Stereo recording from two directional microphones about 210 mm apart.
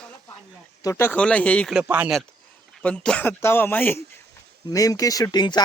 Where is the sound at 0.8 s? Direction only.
15° left (ahead or behind).